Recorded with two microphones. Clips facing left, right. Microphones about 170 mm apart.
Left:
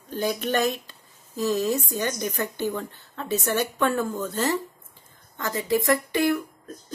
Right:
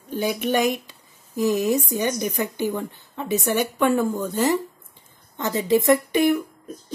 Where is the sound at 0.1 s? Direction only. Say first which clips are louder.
Right 3 dB; 10° right (ahead or behind).